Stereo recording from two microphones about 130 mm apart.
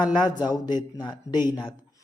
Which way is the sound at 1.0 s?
35° left (ahead or behind).